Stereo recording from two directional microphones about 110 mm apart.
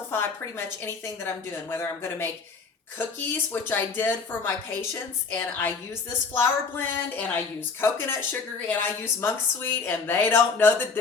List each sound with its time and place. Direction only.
0.1 s a woman's voice: 20° left (ahead or behind)